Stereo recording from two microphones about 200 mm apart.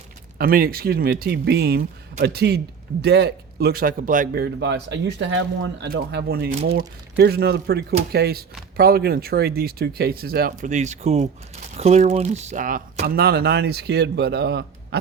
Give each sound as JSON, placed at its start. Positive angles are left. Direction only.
{"t": 0.3, "sound": "speech", "side_deg": -45}
{"t": 4.6, "sound": "speech", "side_deg": -60}
{"t": 5.9, "sound": "speech", "side_deg": -55}
{"t": 10.5, "sound": "speech", "side_deg": -35}